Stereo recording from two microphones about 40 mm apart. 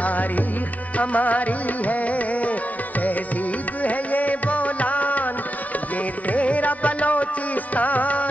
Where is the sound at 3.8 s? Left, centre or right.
Left.